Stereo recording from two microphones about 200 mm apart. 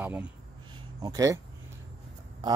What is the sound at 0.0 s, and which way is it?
Speech, 5° right (ahead or behind).